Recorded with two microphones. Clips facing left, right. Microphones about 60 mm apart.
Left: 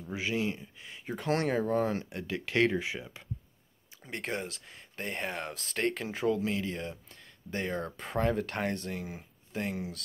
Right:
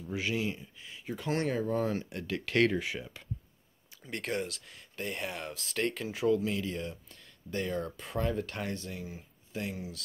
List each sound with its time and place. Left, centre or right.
0.1 s speech: left
0.7 s speech: left
9.0 s speech: left